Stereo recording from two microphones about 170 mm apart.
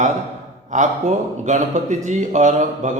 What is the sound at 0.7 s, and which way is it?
A man's voice, 45° right (ahead or behind).